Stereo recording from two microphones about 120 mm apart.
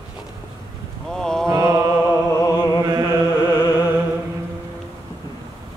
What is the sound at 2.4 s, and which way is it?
Music, 35° left (ahead or behind).